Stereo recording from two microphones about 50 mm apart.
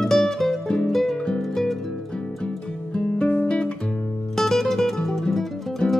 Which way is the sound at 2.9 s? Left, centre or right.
Centre.